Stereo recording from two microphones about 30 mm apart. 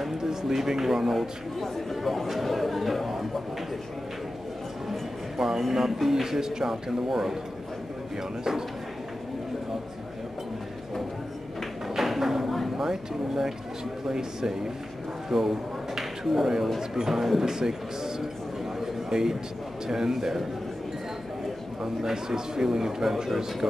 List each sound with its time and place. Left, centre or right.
0.2 s a man's voice: centre
1.6 s speech: centre
5.7 s speech: centre
11.9 s flamenco: centre
12.6 s a sound: centre
14.0 s speech: centre
16.0 s a sound: centre
17.1 s speech: centre
18.8 s a sound: centre
19.9 s speech: centre
22.0 s speech: centre